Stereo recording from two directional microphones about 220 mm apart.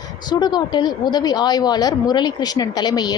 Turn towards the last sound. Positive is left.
turn(degrees=20)  # may be behind; listen again after turning